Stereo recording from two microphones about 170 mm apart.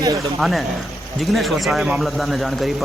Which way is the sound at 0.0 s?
20° right (ahead or behind).